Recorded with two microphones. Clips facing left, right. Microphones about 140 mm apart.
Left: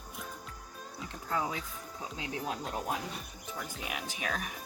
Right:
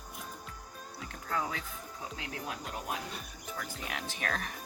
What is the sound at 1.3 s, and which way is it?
Speech, 15° left (ahead or behind).